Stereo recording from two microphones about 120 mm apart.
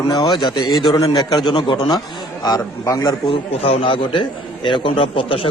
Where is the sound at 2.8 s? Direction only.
30° left (ahead or behind).